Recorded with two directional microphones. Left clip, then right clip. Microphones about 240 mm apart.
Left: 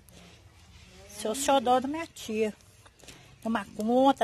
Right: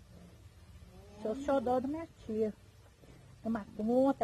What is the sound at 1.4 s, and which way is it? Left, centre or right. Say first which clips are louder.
Speech: left 8 dB; centre.